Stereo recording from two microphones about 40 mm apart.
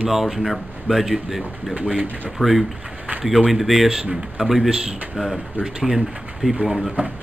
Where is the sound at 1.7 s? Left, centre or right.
Right.